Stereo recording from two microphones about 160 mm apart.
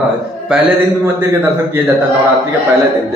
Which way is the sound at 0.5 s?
5° right (ahead or behind).